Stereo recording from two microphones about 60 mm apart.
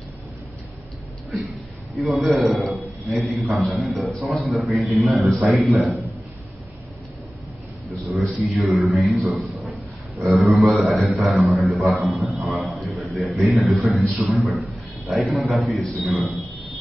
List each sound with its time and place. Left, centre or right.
2.0 s a man's voice: centre
8.1 s a man's voice: centre
14.3 s speech: right
15.0 s a man's voice: centre
16.0 s speech: right